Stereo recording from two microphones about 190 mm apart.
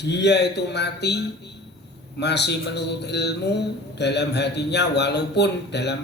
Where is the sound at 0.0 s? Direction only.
65° left (ahead or behind).